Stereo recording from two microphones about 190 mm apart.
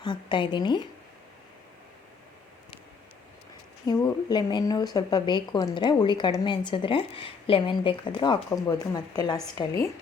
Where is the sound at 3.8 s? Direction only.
20° left (ahead or behind).